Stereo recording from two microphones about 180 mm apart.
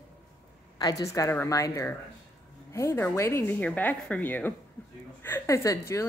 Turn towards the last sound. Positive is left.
turn(degrees=15)  # may be behind; listen again after turning